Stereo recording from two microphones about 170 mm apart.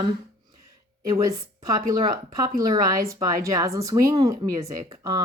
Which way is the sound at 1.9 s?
20° right (ahead or behind).